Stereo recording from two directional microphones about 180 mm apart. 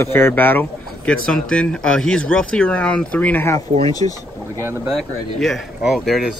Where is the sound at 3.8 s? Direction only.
20° left (ahead or behind).